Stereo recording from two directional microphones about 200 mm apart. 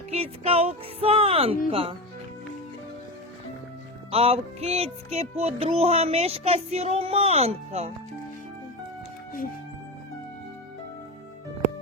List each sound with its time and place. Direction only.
0.1 s speech: 30° right (ahead or behind)
4.1 s music: 30° right (ahead or behind)